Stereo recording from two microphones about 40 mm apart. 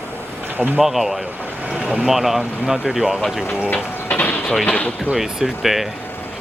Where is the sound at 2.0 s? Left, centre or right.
Centre.